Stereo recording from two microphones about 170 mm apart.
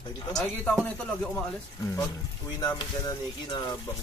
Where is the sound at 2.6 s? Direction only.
20° left (ahead or behind).